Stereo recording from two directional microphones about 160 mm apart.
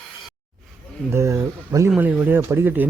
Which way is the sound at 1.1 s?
15° right (ahead or behind).